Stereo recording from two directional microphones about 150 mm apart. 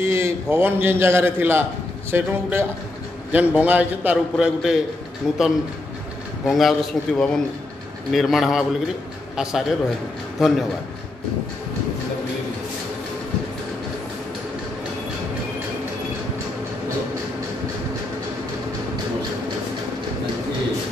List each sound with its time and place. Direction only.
0.0 s a man's voice: 15° right (ahead or behind)
6.4 s a man's voice: centre (ahead or behind)